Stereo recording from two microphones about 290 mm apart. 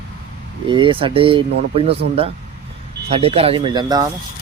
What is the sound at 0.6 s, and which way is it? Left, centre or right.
Speech, centre.